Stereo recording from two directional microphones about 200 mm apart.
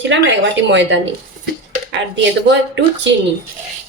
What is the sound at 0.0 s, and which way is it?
Speech, 65° right (ahead or behind).